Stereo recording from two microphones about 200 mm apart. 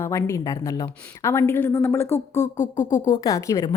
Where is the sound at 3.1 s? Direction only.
15° left (ahead or behind).